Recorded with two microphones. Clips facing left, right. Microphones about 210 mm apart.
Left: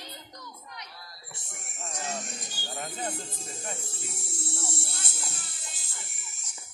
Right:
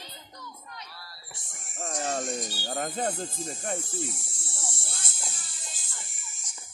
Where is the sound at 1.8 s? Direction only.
55° right (ahead or behind).